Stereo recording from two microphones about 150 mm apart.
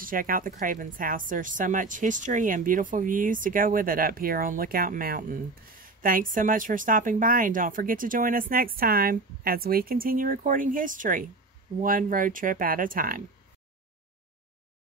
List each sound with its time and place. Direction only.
0.0 s speech: 70° right (ahead or behind)